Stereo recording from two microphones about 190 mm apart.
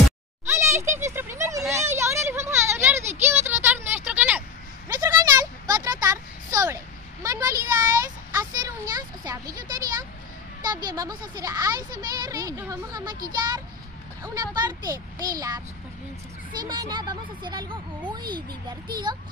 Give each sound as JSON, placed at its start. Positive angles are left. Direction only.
{"t": 0.5, "sound": "a child's voice", "side_deg": -15}
{"t": 1.7, "sound": "a sound", "side_deg": -15}
{"t": 7.2, "sound": "speech", "side_deg": -15}
{"t": 14.2, "sound": "speech", "side_deg": -20}